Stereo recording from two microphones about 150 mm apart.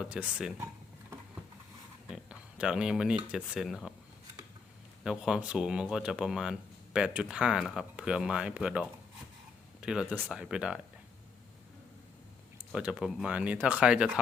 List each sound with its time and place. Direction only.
0.0 s speech: 10° right (ahead or behind)
2.0 s speech: 5° right (ahead or behind)
5.0 s speech: 5° right (ahead or behind)
12.5 s speech: 5° right (ahead or behind)